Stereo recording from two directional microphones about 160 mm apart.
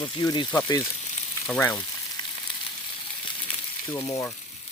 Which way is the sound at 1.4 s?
10° left (ahead or behind).